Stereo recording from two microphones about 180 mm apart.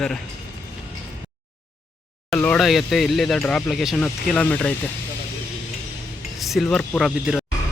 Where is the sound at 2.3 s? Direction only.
5° left (ahead or behind).